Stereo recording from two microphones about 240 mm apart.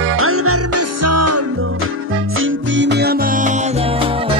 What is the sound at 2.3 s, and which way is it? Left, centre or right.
Music, right.